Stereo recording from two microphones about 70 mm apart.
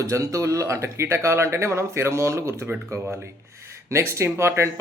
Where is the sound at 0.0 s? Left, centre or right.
Right.